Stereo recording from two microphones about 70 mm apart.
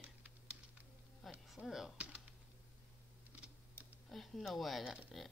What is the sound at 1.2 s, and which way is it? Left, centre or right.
Speech, centre.